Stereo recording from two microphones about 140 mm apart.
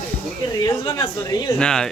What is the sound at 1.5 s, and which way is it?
Speech, 5° left (ahead or behind).